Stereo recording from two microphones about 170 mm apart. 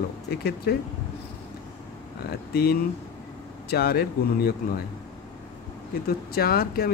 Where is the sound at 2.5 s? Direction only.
65° left (ahead or behind).